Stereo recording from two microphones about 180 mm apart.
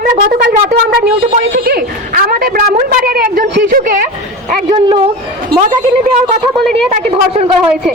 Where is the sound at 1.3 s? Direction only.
50° right (ahead or behind).